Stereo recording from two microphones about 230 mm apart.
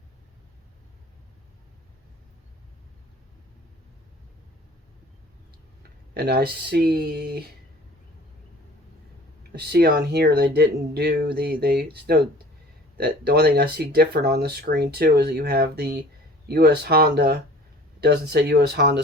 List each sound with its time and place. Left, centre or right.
6.1 s speech: right
9.6 s speech: right